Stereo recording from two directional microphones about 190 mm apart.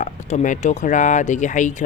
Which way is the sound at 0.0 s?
40° left (ahead or behind).